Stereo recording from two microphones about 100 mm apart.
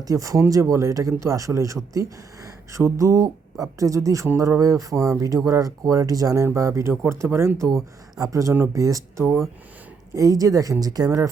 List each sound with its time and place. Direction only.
0.0 s speech: 35° right (ahead or behind)